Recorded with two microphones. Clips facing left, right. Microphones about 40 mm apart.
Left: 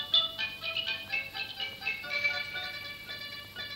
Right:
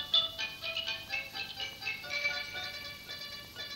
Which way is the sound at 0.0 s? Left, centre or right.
Centre.